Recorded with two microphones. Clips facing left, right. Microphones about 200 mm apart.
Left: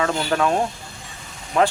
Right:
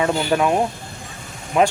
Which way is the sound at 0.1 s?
15° right (ahead or behind).